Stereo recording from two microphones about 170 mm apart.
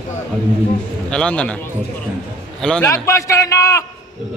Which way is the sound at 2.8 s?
15° left (ahead or behind).